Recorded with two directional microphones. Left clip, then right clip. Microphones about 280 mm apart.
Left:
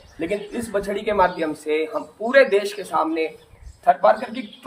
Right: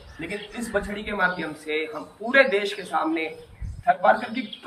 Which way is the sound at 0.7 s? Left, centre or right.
Centre.